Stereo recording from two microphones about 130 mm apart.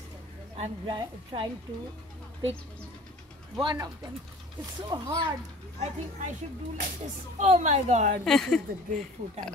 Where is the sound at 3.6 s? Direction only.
35° right (ahead or behind).